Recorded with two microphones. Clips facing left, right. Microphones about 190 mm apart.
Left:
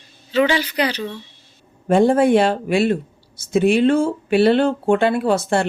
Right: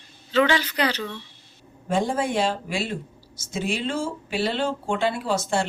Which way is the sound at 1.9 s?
60° left (ahead or behind).